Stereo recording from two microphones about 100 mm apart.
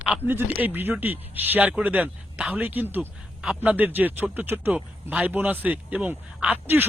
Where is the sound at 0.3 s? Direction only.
20° right (ahead or behind).